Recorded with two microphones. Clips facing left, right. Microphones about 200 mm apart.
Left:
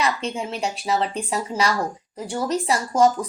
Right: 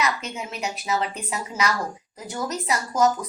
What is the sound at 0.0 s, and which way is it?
Speech, 30° left (ahead or behind).